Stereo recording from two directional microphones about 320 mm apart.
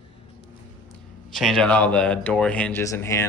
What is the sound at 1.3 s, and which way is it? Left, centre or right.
Speech, centre.